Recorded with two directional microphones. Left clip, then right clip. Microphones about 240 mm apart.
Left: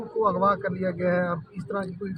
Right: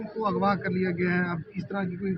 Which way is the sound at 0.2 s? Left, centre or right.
Left.